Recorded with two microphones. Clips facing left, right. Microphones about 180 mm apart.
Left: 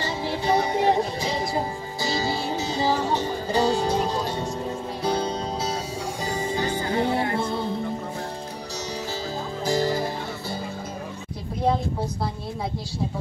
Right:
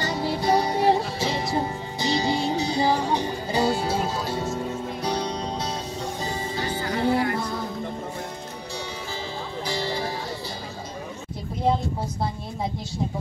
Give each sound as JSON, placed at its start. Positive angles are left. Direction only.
{"t": 0.0, "sound": "music", "side_deg": -40}
{"t": 2.0, "sound": "music", "side_deg": -20}
{"t": 6.8, "sound": "music", "side_deg": 25}
{"t": 9.7, "sound": "music", "side_deg": 45}